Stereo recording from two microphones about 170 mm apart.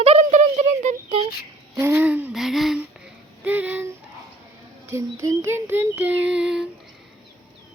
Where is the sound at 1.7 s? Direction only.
15° right (ahead or behind).